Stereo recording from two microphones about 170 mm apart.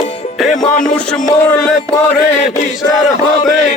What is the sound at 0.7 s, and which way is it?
Music, 50° left (ahead or behind).